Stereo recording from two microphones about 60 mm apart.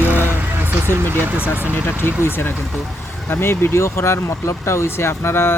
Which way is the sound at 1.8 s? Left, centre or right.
Left.